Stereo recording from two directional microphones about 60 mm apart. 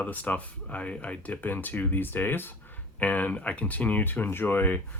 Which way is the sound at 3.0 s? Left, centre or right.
Left.